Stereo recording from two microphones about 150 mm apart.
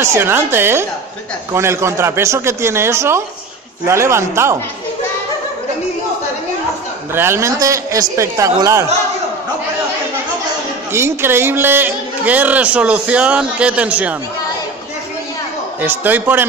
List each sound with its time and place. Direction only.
0.0 s a man's voice: 15° right (ahead or behind)
7.2 s a man's voice: 15° right (ahead or behind)
10.9 s a man's voice: 15° right (ahead or behind)
15.8 s a man's voice: 10° right (ahead or behind)